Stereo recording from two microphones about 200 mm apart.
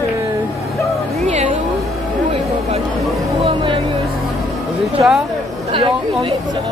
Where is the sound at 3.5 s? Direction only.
25° right (ahead or behind).